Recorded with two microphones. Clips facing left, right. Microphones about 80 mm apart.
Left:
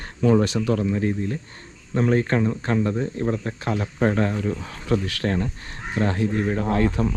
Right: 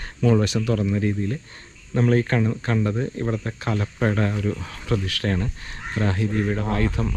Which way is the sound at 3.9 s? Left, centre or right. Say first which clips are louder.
Left 3 dB; left.